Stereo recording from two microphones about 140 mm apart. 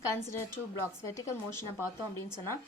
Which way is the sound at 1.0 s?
20° left (ahead or behind).